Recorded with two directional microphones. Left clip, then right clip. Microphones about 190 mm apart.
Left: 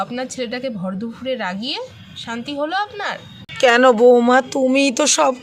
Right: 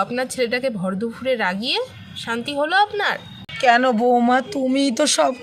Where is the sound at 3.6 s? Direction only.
50° left (ahead or behind); by 5.3 s 35° left (ahead or behind).